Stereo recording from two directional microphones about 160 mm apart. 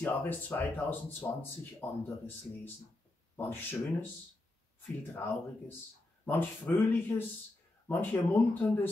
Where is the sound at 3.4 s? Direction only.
15° left (ahead or behind).